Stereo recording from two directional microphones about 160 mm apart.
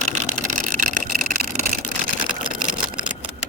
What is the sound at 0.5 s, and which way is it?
Vehicle, 55° right (ahead or behind).